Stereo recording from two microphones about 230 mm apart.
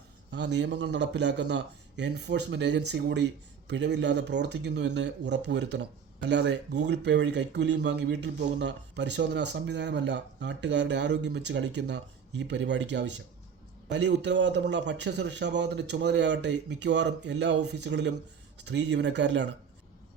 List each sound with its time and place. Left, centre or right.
0.3 s speech: right